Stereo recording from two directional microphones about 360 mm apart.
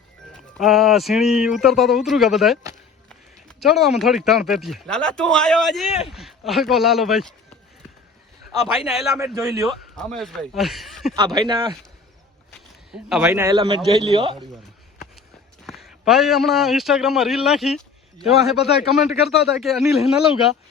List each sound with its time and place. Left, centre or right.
0.3 s speech: centre
3.6 s speech: centre
8.8 s speech: centre
11.1 s speech: centre
15.6 s a man's voice: centre